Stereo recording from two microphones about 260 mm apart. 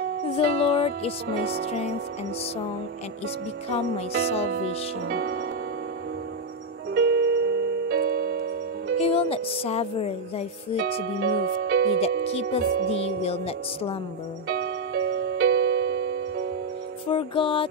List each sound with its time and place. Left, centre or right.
0.4 s music: left
4.5 s music: right
6.9 s music: right
9.0 s music: left
11.1 s speech: right
12.3 s music: left
12.6 s music: right
12.9 s music: left
14.5 s music: right
17.1 s music: centre